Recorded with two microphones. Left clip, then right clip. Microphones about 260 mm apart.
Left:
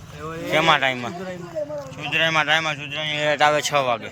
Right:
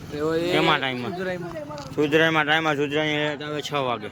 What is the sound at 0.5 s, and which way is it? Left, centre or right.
Speech, centre.